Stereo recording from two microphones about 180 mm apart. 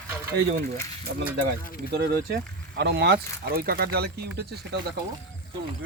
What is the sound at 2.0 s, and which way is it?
Speech, 70° right (ahead or behind).